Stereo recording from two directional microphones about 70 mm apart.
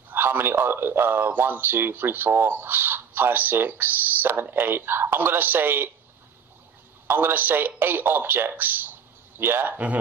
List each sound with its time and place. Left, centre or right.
0.1 s speech: right
7.1 s speech: right